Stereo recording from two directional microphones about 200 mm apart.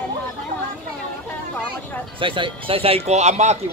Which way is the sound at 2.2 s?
25° right (ahead or behind).